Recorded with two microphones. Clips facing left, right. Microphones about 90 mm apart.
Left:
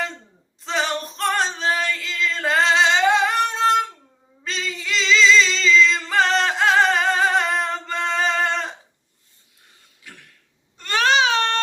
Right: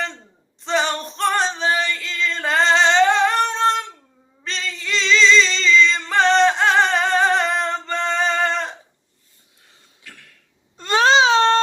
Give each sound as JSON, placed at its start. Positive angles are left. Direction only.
{"t": 0.6, "sound": "female singing", "side_deg": 0}
{"t": 4.4, "sound": "singing", "side_deg": 5}
{"t": 10.8, "sound": "baby cry", "side_deg": -20}